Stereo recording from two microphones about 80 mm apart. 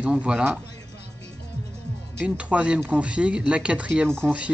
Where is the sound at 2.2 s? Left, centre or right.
Centre.